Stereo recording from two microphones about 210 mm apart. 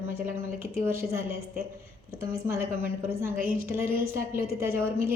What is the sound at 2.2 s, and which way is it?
A woman's voice, 15° right (ahead or behind).